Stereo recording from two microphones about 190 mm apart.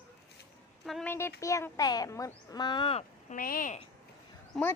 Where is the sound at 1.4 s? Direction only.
15° left (ahead or behind).